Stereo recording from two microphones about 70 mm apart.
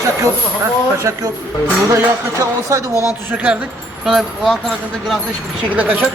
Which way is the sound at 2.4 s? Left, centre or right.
Right.